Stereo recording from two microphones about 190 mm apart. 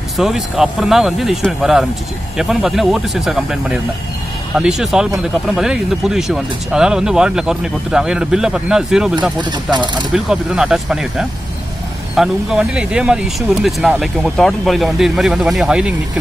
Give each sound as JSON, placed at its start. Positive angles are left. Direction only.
{"t": 0.2, "sound": "speech", "side_deg": 0}
{"t": 9.4, "sound": "speech", "side_deg": -25}
{"t": 10.1, "sound": "speech", "side_deg": -5}